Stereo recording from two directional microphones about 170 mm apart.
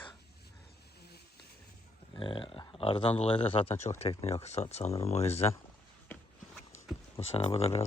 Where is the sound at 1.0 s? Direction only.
70° left (ahead or behind).